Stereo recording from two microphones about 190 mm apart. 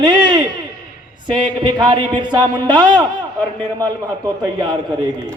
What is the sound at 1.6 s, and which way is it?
A man's voice, 25° right (ahead or behind).